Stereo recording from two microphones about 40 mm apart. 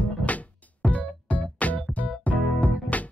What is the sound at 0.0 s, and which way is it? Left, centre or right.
Music, left.